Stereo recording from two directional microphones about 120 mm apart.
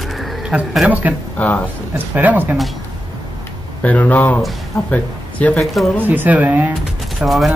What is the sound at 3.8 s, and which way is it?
Speech, 15° left (ahead or behind).